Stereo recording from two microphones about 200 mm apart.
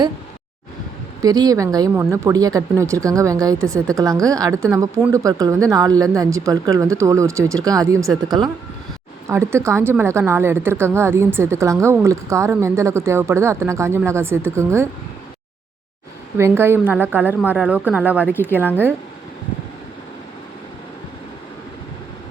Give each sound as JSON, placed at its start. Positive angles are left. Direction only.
{"t": 1.2, "sound": "a woman's voice", "side_deg": -20}
{"t": 9.3, "sound": "a woman's voice", "side_deg": -15}
{"t": 16.4, "sound": "a woman's voice", "side_deg": -10}